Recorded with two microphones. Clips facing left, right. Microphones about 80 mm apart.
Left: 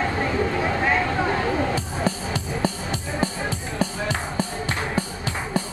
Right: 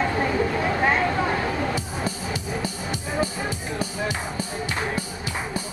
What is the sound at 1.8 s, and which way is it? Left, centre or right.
Music, left.